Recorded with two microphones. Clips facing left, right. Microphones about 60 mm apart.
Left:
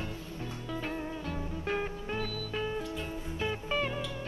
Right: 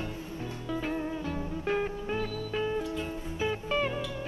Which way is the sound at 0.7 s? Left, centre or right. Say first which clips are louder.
Right 5 dB; centre.